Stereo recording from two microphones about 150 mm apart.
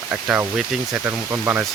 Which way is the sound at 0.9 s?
15° right (ahead or behind).